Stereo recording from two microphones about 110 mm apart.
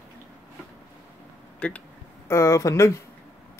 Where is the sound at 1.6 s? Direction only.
10° left (ahead or behind).